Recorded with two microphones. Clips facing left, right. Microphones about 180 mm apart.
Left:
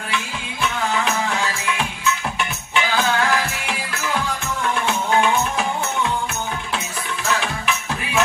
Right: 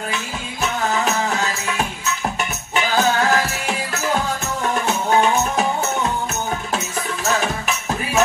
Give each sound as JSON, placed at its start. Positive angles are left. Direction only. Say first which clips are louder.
{"t": 0.1, "sound": "music", "louder": "even", "side_deg": -40}
{"t": 2.7, "sound": "music", "louder": "right 2 dB", "side_deg": -40}
{"t": 4.8, "sound": "music", "louder": "right 1 dB", "side_deg": -40}
{"t": 7.3, "sound": "music", "louder": "right 2 dB", "side_deg": -40}